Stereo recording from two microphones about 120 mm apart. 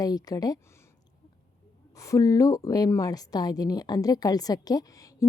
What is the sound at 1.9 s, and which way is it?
A woman's voice, 25° left (ahead or behind).